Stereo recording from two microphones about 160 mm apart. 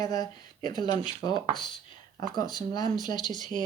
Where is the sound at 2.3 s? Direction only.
25° left (ahead or behind).